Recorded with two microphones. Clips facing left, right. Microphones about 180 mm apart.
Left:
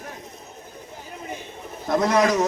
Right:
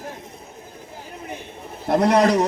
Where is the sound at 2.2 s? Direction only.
30° right (ahead or behind).